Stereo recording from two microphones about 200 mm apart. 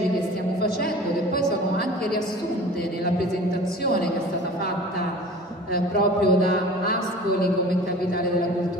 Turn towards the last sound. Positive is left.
turn(degrees=50)  # may be behind; listen again after turning